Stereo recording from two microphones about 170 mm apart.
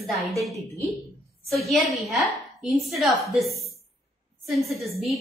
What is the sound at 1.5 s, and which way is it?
A woman's voice, centre (ahead or behind).